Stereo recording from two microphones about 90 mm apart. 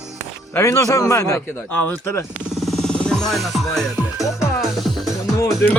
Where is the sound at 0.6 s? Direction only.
35° left (ahead or behind).